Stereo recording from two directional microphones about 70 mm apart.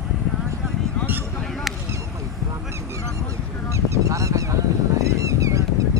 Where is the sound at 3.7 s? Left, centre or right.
Right.